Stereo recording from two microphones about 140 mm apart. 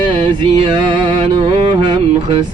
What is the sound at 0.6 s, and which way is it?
Music, 40° right (ahead or behind).